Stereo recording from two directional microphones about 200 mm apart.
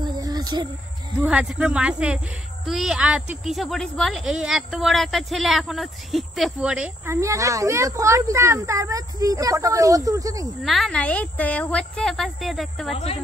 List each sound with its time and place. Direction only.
0.0 s a sound: 20° right (ahead or behind)
1.2 s speech: 5° right (ahead or behind)
10.6 s speech: centre (ahead or behind)
12.9 s speech: 30° left (ahead or behind)